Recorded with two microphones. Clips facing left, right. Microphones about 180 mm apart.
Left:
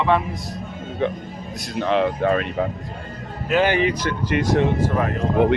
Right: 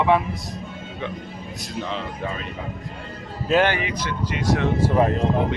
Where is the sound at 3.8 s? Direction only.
50° left (ahead or behind).